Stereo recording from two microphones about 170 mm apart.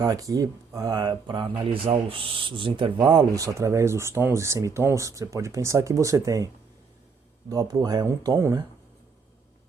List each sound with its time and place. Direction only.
0.0 s speech: 20° right (ahead or behind)
7.5 s speech: 20° right (ahead or behind)